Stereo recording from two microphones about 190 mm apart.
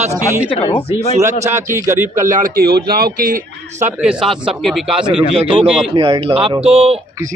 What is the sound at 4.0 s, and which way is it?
Speech, 5° right (ahead or behind).